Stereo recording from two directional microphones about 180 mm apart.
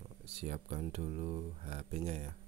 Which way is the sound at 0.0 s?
35° right (ahead or behind).